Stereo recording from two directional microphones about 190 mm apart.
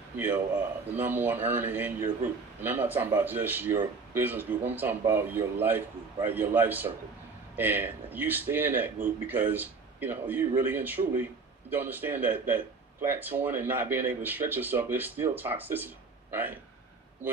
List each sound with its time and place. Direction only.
0.9 s speech: 10° right (ahead or behind)